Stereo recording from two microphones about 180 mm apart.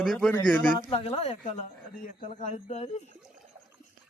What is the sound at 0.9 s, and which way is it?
Speech, 30° left (ahead or behind).